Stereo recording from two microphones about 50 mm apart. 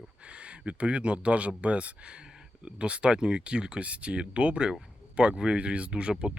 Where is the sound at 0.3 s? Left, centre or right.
Right.